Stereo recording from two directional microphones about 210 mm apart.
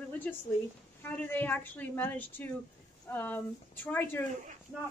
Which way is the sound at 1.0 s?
10° left (ahead or behind).